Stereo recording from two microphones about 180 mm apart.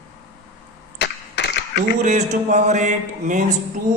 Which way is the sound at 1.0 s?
70° left (ahead or behind).